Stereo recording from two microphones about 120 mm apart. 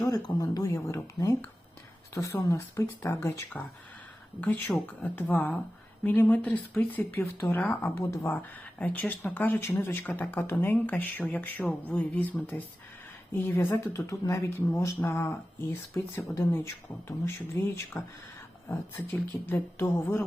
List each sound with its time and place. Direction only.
0.0 s speech: 30° left (ahead or behind)